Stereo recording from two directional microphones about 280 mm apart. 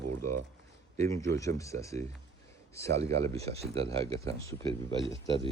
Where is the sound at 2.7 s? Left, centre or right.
Centre.